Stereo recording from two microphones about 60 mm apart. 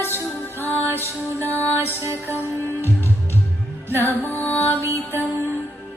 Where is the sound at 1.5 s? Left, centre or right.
Left.